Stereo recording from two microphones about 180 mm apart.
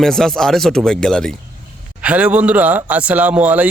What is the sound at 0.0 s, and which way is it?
Speech, centre (ahead or behind).